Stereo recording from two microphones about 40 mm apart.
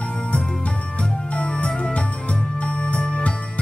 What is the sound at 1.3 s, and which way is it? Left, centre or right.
Music, left.